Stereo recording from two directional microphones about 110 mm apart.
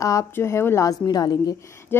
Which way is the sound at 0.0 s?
30° left (ahead or behind).